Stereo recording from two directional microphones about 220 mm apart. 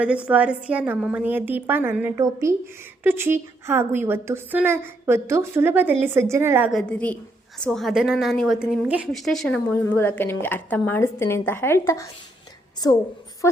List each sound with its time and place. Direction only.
0.0 s a woman's voice: 5° right (ahead or behind); by 13.6 s 15° left (ahead or behind)